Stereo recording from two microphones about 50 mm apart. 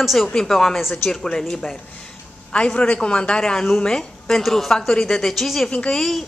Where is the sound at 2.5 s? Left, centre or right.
Left.